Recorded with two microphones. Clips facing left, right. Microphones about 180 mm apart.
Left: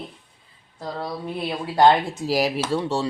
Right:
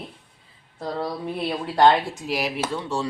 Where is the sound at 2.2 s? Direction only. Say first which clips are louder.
Left 5 dB; 40° left (ahead or behind).